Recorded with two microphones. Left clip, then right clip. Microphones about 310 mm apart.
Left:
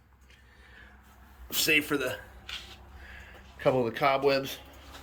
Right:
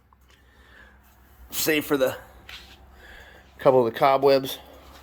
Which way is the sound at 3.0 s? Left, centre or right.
Centre.